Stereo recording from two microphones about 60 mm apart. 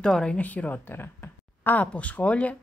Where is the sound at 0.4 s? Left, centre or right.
Left.